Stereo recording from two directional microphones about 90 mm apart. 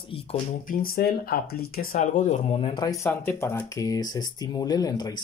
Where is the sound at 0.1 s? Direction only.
90° left.